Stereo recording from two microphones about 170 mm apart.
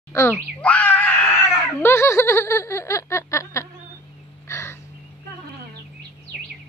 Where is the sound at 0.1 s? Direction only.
15° left (ahead or behind).